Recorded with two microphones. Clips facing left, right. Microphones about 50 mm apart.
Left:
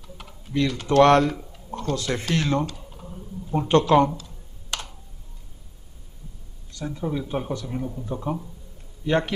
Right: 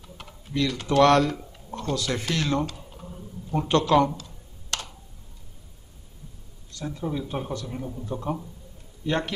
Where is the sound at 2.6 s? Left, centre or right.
Centre.